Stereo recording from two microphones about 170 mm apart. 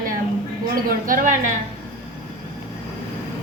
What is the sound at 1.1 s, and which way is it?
Speech, 50° right (ahead or behind).